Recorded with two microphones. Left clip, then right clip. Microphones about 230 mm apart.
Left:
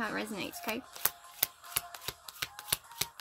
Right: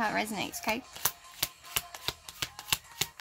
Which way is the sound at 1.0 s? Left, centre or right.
Left.